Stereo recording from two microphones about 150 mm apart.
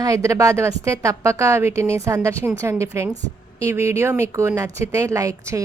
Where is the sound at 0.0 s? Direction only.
20° right (ahead or behind).